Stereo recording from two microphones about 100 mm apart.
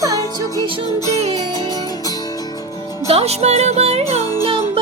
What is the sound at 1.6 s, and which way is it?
Music, 40° left (ahead or behind).